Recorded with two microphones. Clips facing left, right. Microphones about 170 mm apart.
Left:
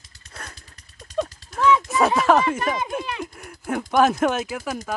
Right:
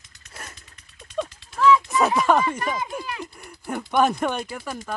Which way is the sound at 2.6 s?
20° left (ahead or behind).